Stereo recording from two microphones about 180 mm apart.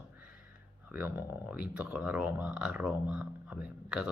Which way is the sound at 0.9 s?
10° right (ahead or behind).